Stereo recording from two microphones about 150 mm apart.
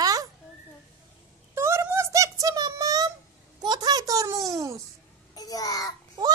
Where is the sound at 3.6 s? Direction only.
30° right (ahead or behind).